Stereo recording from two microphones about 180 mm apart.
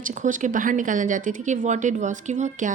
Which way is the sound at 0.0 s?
45° right (ahead or behind).